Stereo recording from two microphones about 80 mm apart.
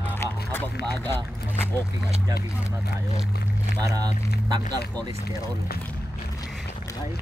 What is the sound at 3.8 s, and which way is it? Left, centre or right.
Speech, right.